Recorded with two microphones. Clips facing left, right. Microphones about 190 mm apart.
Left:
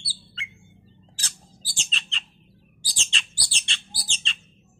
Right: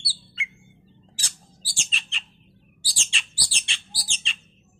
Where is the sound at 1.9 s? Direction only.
10° right (ahead or behind).